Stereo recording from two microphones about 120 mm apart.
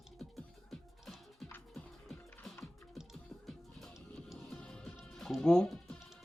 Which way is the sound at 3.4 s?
Centre (ahead or behind).